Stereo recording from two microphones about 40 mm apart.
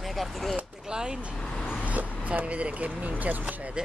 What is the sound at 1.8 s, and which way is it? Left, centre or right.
Vehicle, right.